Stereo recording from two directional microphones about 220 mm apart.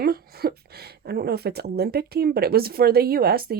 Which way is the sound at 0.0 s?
45° right (ahead or behind).